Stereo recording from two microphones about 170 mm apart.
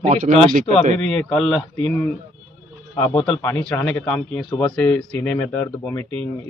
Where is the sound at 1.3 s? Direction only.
5° left (ahead or behind).